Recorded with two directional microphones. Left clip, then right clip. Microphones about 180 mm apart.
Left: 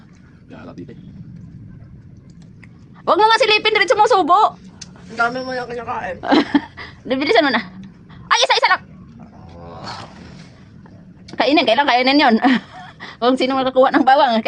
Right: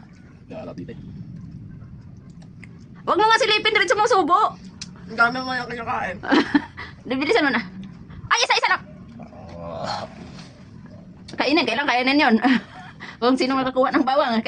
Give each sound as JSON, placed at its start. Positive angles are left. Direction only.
{"t": 3.0, "sound": "a woman's voice", "side_deg": 25}
{"t": 5.1, "sound": "a man's voice", "side_deg": -15}
{"t": 6.2, "sound": "speech", "side_deg": 20}
{"t": 8.3, "sound": "a sound", "side_deg": 25}
{"t": 11.3, "sound": "speech", "side_deg": 25}